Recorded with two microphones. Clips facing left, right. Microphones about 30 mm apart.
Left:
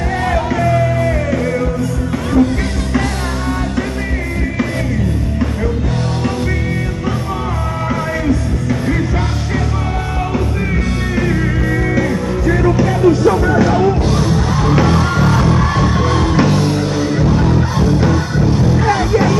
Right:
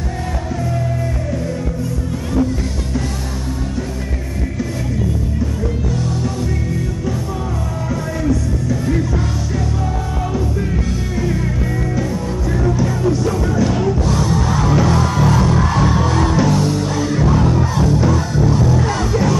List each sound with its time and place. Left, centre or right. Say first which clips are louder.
0.6 s music: left 8 dB; left
2.3 s music: left 5 dB; left
7.9 s music: left 2 dB; left
11.9 s music: left 5 dB; left
13.8 s music: left 3 dB; left; by 17.8 s centre
17.8 s music: left 2 dB; left